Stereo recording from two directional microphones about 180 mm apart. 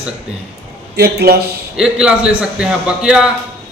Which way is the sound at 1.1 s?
60° right (ahead or behind).